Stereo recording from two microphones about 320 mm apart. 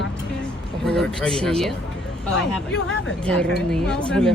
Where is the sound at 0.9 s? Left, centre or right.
Centre.